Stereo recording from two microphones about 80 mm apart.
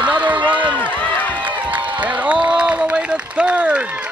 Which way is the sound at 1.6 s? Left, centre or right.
Centre.